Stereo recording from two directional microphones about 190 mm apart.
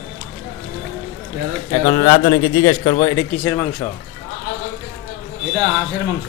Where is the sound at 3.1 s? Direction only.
10° left (ahead or behind).